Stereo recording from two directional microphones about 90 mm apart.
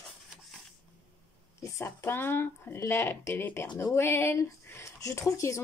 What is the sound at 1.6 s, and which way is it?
Speech, 30° left (ahead or behind).